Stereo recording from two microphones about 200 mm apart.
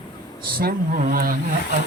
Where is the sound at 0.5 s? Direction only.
45° right (ahead or behind).